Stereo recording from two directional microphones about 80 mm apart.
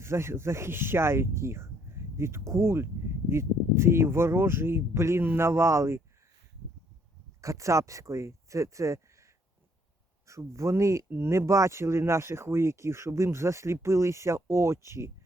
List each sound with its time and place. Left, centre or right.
0.0 s speech: right
7.4 s speech: right